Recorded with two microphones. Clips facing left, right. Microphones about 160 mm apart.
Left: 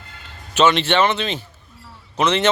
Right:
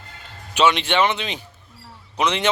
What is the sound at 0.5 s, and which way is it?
Speech, 15° right (ahead or behind).